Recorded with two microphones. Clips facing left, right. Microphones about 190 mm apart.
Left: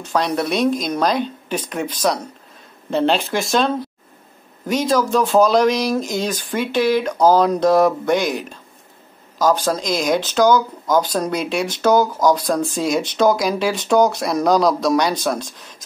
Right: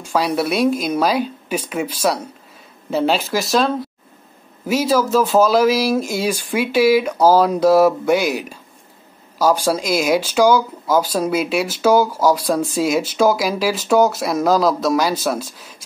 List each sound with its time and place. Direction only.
0.0 s speech: 10° right (ahead or behind)